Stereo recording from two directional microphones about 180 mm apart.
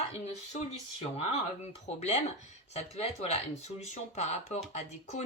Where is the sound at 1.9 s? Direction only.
35° left (ahead or behind).